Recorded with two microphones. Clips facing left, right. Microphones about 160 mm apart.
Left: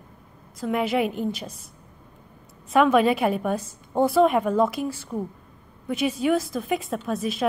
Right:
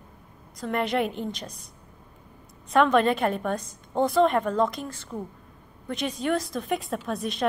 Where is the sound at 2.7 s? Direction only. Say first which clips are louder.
Left 2 dB; 5° left (ahead or behind).